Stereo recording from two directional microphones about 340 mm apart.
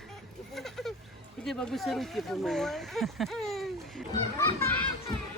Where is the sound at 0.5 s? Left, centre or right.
Centre.